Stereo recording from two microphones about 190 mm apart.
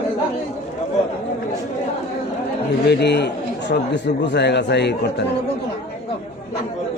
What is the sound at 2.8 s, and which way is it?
Speech, 60° left (ahead or behind).